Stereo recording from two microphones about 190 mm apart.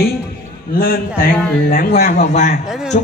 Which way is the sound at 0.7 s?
50° left (ahead or behind).